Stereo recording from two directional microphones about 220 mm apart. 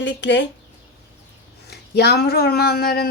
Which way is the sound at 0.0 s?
55° left (ahead or behind).